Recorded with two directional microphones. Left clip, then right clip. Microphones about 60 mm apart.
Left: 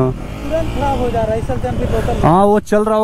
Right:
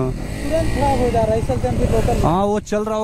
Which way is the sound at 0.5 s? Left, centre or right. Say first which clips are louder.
Left 1 dB; right.